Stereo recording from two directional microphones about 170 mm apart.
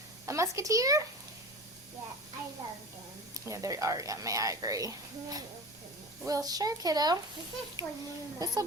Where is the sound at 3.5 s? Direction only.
20° right (ahead or behind).